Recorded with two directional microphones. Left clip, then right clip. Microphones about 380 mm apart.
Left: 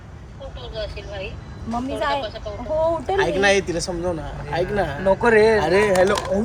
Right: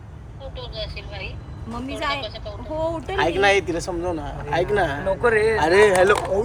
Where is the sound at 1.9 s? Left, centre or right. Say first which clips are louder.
Left 2 dB; centre.